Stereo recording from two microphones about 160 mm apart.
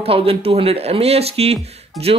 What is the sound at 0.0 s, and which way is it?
A man's voice, 35° right (ahead or behind).